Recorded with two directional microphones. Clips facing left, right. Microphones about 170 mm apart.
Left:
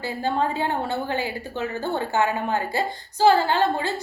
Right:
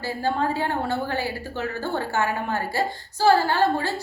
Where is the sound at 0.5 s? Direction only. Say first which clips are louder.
Even; 20° left (ahead or behind).